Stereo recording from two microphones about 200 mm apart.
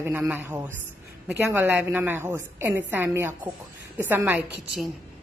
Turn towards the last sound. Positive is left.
turn(degrees=-10)  # may be behind; listen again after turning